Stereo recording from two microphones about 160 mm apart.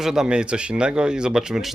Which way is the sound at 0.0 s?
5° right (ahead or behind).